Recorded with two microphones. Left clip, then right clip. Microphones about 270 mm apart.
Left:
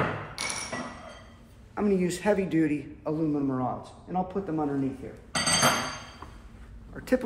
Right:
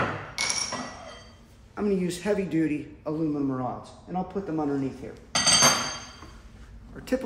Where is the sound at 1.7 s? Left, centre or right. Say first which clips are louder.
Left 1 dB; centre.